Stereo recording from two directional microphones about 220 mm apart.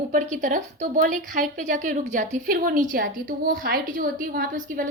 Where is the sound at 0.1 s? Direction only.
35° right (ahead or behind).